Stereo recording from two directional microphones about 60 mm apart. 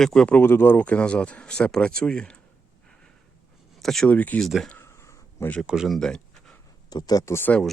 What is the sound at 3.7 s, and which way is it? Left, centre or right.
Speech, centre.